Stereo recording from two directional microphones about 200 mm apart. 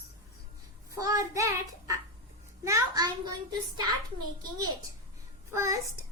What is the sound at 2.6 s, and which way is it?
Speech, 15° right (ahead or behind).